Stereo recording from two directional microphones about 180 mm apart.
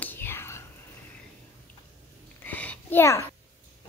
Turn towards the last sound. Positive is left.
turn(degrees=15)  # may be behind; listen again after turning